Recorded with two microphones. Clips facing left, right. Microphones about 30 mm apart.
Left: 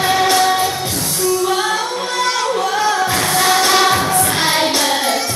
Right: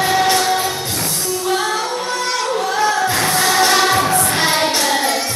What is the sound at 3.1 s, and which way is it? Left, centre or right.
Music, centre.